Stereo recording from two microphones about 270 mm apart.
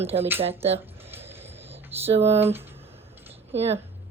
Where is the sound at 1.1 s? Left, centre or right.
Centre.